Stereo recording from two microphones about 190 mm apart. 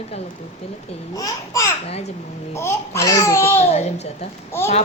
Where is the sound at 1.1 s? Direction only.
15° left (ahead or behind).